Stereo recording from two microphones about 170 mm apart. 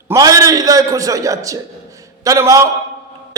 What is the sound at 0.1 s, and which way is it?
A man's voice, 20° right (ahead or behind).